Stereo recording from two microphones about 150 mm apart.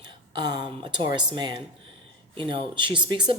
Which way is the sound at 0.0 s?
30° right (ahead or behind).